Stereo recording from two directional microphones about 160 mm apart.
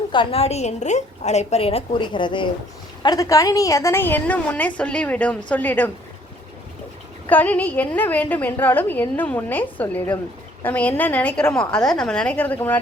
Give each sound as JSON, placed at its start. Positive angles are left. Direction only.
{"t": 0.1, "sound": "a woman's voice", "side_deg": 35}
{"t": 7.3, "sound": "a woman's voice", "side_deg": 10}